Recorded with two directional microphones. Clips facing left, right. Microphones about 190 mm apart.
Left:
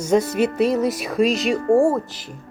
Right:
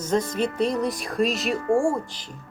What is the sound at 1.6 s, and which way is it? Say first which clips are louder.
Speech: left 5 dB; 35° left (ahead or behind).